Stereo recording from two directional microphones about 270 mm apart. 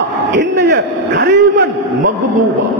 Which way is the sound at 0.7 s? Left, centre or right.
Right.